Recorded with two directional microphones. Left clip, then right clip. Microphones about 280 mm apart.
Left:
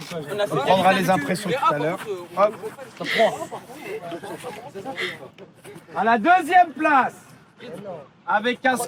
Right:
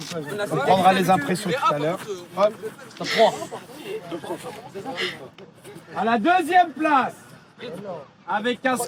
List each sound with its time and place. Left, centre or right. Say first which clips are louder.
0.0 s speech: left 3 dB; left
0.7 s speech: right 1 dB; centre
1.5 s speech: left 1 dB; left
1.7 s speech: even; centre
2.0 s speech: left 2 dB; left
3.0 s speech: right 1 dB; centre
4.8 s speech: right 1 dB; centre
5.9 s speech: left 3 dB; centre
8.3 s speech: left 3 dB; centre